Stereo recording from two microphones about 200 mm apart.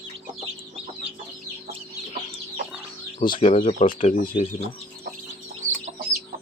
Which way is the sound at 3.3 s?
30° left (ahead or behind).